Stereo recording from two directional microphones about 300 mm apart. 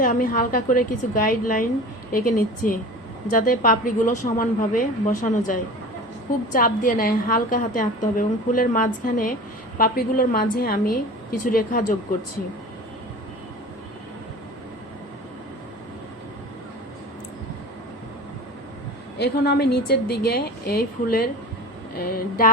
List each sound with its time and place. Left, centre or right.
0.0 s a woman's voice: left
6.5 s a woman's voice: left
19.2 s a woman's voice: left